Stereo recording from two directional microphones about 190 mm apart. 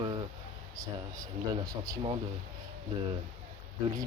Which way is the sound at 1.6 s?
20° right (ahead or behind).